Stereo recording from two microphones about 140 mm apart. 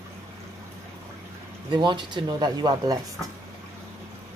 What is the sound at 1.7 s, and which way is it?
Speech, 35° right (ahead or behind).